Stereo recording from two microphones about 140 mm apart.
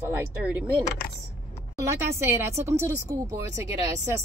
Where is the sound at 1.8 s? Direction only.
20° right (ahead or behind).